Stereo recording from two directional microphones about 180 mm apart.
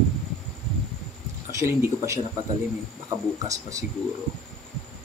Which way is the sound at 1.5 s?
15° right (ahead or behind).